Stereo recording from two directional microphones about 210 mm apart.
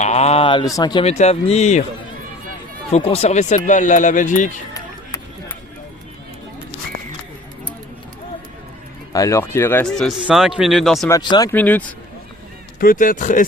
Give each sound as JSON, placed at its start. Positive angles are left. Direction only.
{"t": 0.0, "sound": "speech", "side_deg": 30}
{"t": 2.9, "sound": "speech", "side_deg": 30}
{"t": 9.1, "sound": "speech", "side_deg": 15}
{"t": 11.1, "sound": "speech", "side_deg": 20}
{"t": 12.8, "sound": "speech", "side_deg": 40}